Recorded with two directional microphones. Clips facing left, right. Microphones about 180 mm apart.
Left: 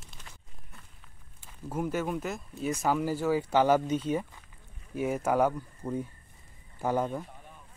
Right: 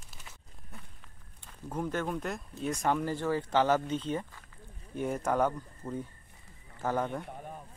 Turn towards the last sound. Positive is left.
turn(degrees=10)  # may be behind; listen again after turning